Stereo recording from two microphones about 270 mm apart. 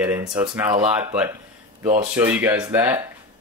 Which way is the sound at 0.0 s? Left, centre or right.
Centre.